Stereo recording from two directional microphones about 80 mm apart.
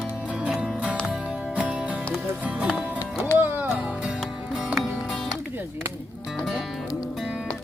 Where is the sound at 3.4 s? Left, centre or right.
Right.